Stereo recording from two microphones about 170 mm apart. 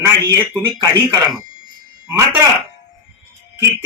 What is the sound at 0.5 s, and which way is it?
Speech, 10° left (ahead or behind).